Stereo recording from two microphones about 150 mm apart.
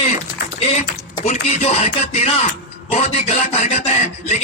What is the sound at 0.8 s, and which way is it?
Speech, 50° left (ahead or behind).